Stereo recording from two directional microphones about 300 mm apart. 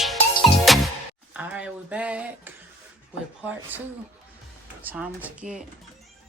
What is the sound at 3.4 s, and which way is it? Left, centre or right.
Speech, centre.